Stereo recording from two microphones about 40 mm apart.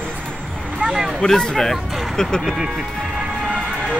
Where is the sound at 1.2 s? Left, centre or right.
Centre.